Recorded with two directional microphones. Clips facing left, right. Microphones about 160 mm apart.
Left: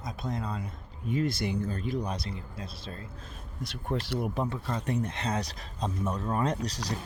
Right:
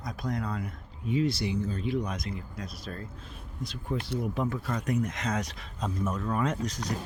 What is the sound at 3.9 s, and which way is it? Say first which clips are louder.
Speech: left 1 dB; 65° left (ahead or behind).